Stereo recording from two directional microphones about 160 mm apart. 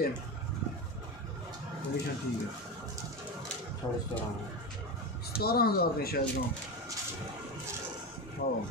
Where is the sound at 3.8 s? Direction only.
25° left (ahead or behind).